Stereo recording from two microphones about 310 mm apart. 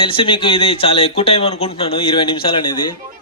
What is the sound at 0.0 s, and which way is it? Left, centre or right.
Speech, centre.